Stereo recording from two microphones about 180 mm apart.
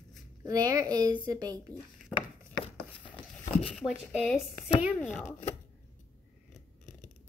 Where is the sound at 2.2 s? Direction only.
30° left (ahead or behind).